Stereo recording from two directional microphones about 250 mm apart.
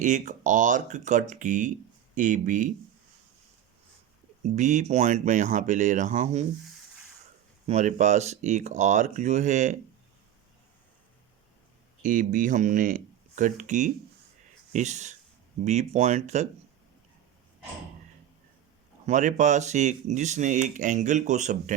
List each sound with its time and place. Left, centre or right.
0.0 s speech: right
4.4 s speech: right
7.7 s speech: right
12.0 s speech: right
19.0 s speech: right